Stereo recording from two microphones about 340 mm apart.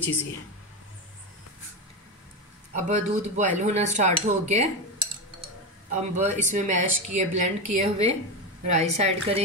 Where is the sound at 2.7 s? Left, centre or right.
Right.